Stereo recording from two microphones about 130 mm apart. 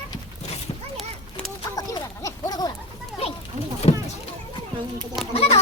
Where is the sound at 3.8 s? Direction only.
55° left (ahead or behind).